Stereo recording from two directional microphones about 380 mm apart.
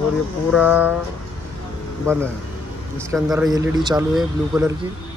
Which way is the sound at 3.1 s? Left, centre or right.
Centre.